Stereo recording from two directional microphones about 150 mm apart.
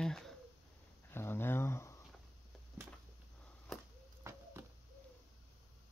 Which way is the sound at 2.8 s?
15° right (ahead or behind).